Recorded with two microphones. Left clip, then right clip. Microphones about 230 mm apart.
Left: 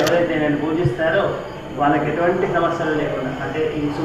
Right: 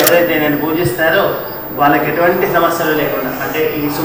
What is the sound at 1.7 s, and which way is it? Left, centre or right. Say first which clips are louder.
A man's voice: right 6 dB; centre.